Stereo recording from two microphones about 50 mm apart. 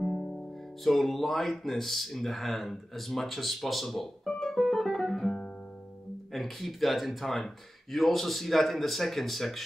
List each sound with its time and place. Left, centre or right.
0.0 s music: centre
0.8 s speech: centre